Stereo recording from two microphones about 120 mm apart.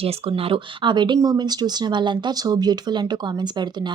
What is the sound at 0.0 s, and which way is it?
Speech, 55° right (ahead or behind).